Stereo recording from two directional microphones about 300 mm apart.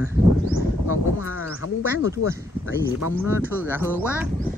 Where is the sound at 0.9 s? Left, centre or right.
Left.